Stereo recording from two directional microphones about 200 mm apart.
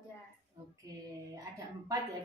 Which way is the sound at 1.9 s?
20° right (ahead or behind).